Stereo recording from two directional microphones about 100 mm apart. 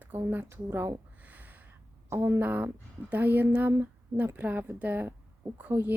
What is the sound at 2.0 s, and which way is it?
Speech, 25° right (ahead or behind).